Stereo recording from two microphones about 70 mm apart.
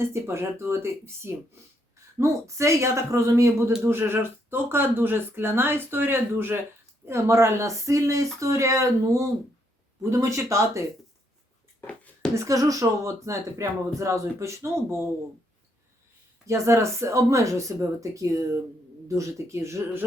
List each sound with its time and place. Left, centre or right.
0.0 s speech: right
3.8 s speech: right
12.3 s speech: right
16.5 s speech: right